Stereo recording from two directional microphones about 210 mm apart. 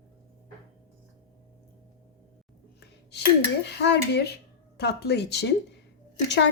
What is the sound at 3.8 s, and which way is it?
Speech, 55° left (ahead or behind).